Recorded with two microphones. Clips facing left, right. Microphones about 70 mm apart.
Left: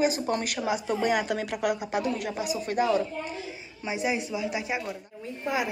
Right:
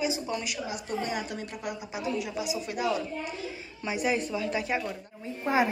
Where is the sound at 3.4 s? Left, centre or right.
Left.